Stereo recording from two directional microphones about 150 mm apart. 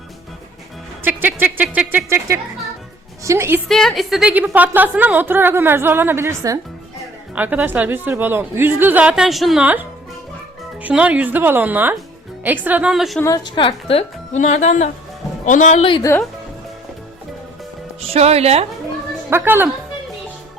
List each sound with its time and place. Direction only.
1.0 s a woman's voice: 10° right (ahead or behind)
3.7 s a woman's voice: centre (ahead or behind)
10.8 s a woman's voice: 10° right (ahead or behind)
13.2 s a man's voice: 25° left (ahead or behind); by 15.8 s 55° left (ahead or behind)
15.8 s speech: 35° left (ahead or behind)
18.1 s speech: 45° right (ahead or behind)
19.3 s a woman's voice: 15° right (ahead or behind)